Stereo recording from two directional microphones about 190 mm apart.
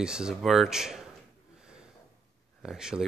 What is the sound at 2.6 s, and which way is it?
Speech, 5° right (ahead or behind).